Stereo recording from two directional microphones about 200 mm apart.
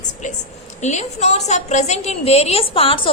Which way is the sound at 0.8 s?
35° left (ahead or behind).